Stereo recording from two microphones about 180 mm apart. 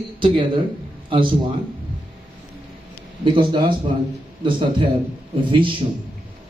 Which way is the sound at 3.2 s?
25° right (ahead or behind).